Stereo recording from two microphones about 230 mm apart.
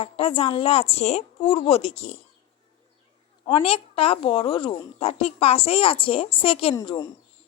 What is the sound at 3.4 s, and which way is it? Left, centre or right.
A woman's voice, left.